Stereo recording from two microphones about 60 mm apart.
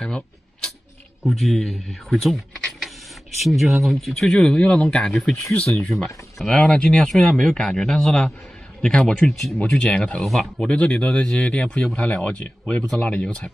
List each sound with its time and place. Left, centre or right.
0.0 s speech: centre
4.3 s speech: centre
10.2 s speech: centre
10.6 s speech: centre